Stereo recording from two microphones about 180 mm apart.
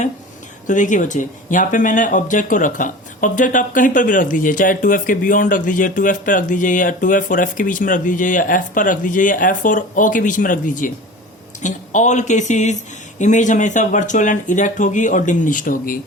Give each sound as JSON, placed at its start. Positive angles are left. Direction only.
{"t": 0.7, "sound": "speech", "side_deg": 45}